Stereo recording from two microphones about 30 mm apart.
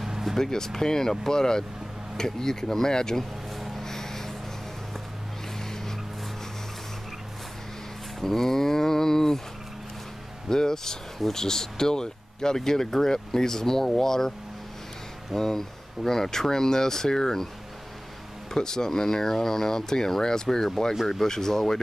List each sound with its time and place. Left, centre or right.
0.0 s a sound: centre
0.4 s speech: centre
3.8 s a sound: centre
5.6 s vehicle: centre
8.2 s speech: centre
10.5 s speech: centre
15.3 s speech: centre
18.5 s speech: centre